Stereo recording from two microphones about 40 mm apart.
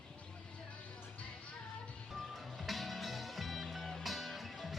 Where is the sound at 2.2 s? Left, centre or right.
Centre.